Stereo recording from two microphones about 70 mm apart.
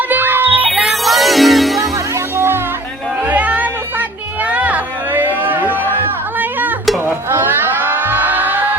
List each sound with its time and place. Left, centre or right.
0.1 s music: right
0.9 s music: centre
2.3 s music: right
3.2 s music: right
4.4 s a sound: right